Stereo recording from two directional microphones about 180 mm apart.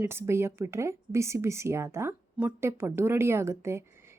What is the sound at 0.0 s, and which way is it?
Speech, 15° right (ahead or behind).